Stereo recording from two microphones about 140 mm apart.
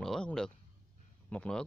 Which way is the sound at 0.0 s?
5° left (ahead or behind).